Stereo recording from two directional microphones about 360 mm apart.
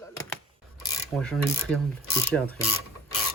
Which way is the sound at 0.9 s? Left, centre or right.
Centre.